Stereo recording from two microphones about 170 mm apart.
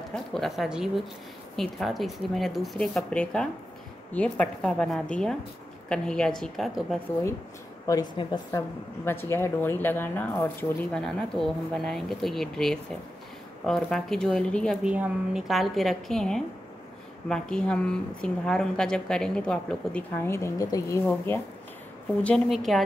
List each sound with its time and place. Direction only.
0.1 s a woman's voice: centre (ahead or behind)
7.8 s a woman's voice: 20° left (ahead or behind)
8.5 s a woman's voice: 15° left (ahead or behind)